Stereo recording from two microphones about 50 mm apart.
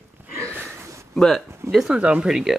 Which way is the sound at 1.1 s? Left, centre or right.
Centre.